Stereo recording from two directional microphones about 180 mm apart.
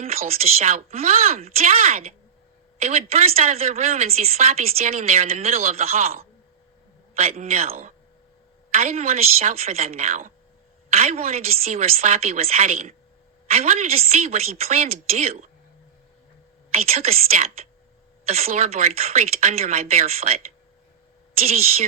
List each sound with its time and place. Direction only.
0.0 s a woman's voice: 35° right (ahead or behind)
7.2 s a woman's voice: 35° right (ahead or behind)
7.7 s speech: 50° right (ahead or behind)
8.7 s a woman's voice: 35° right (ahead or behind)
16.7 s a woman's voice: 35° right (ahead or behind)